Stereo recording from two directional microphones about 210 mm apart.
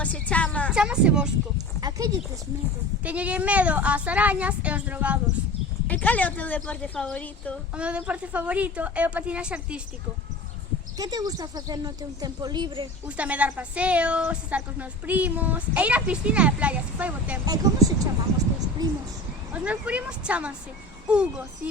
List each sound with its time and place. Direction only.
0.0 s music: 5° left (ahead or behind)
0.7 s a woman's voice: 5° right (ahead or behind)
1.5 s a sound: 15° right (ahead or behind)
3.0 s speech: 5° right (ahead or behind)
5.9 s a woman's voice: 5° left (ahead or behind)
7.8 s a woman's voice: 5° right (ahead or behind)
10.9 s a woman's voice: 15° right (ahead or behind)
13.1 s speech: 5° right (ahead or behind)
17.4 s speech: 15° right (ahead or behind)
19.5 s a woman's voice: 5° right (ahead or behind)